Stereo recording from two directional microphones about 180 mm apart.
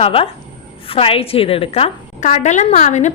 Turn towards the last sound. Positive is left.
turn(degrees=40)  # may be behind; listen again after turning